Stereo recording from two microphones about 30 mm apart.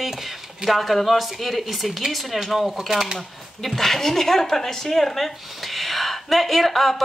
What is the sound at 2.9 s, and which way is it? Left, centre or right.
Speech, centre.